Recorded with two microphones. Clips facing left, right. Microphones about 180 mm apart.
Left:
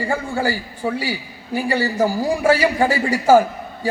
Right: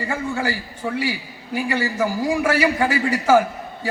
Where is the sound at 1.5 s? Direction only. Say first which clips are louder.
Left 3 dB; 40° left (ahead or behind).